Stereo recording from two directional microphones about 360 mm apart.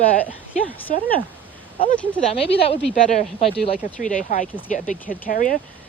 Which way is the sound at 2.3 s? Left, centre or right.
Centre.